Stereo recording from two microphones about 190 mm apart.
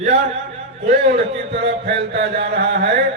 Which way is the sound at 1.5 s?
65° right (ahead or behind).